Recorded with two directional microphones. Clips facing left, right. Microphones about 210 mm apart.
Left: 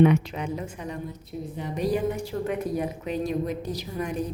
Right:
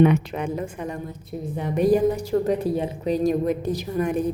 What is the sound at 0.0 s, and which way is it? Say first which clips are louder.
A woman's voice: right 2 dB; 55° right (ahead or behind).